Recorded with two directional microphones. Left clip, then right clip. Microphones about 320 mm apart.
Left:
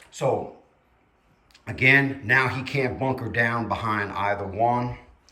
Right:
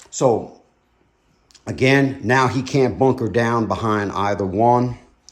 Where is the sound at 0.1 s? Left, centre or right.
Centre.